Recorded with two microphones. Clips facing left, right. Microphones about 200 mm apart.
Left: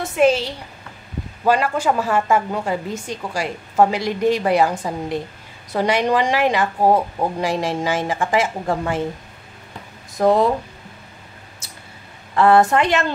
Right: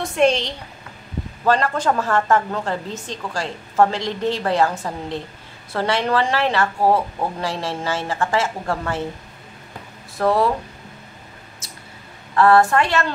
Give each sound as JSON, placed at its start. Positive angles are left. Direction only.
{"t": 0.0, "sound": "a woman's voice", "side_deg": 5}
{"t": 10.1, "sound": "a woman's voice", "side_deg": 20}
{"t": 12.4, "sound": "a woman's voice", "side_deg": 20}